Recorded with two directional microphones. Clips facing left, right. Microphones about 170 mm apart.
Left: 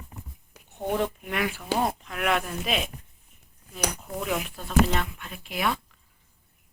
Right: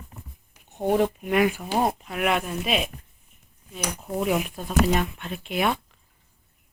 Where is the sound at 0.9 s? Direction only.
30° right (ahead or behind).